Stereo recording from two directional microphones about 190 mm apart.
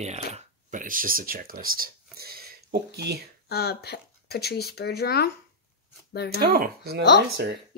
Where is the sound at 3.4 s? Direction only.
55° left (ahead or behind).